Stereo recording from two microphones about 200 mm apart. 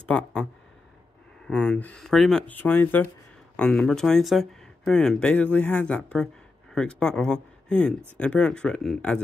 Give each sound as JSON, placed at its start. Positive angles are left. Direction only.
{"t": 0.1, "sound": "speech", "side_deg": 5}
{"t": 1.5, "sound": "speech", "side_deg": 5}